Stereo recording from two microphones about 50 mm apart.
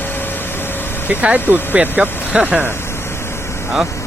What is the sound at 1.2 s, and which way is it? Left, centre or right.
Speech, right.